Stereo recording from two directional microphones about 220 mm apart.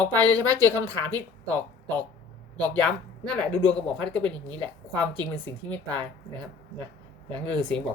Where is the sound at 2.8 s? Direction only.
5° left (ahead or behind).